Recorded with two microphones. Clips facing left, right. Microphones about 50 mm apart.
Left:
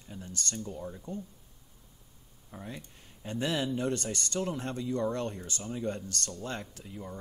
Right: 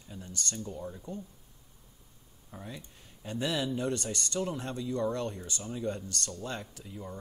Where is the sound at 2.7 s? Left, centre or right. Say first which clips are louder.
Left 1 dB; left.